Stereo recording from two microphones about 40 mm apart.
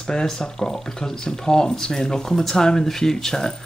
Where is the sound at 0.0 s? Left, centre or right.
Centre.